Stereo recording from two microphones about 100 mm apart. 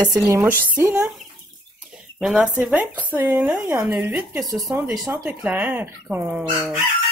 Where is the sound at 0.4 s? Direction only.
20° right (ahead or behind).